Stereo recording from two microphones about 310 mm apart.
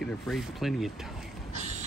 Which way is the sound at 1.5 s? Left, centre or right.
Right.